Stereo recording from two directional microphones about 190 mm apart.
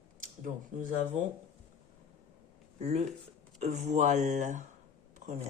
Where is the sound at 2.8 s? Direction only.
35° right (ahead or behind).